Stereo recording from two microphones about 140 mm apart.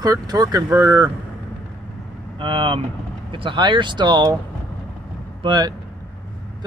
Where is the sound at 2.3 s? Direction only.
40° right (ahead or behind).